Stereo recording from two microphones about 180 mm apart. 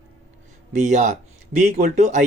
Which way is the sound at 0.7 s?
40° right (ahead or behind).